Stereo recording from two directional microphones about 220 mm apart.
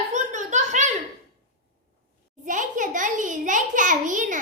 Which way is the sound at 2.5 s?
35° right (ahead or behind).